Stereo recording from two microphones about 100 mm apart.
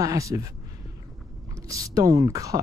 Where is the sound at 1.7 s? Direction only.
35° right (ahead or behind).